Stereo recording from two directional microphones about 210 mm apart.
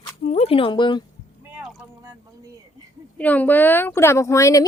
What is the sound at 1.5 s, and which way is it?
Boat, centre (ahead or behind).